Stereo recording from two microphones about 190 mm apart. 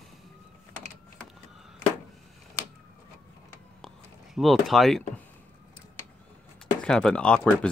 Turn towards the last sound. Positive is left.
turn(degrees=5)  # may be behind; listen again after turning